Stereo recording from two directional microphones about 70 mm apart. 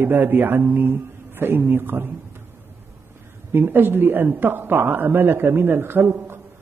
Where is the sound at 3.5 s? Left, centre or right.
Right.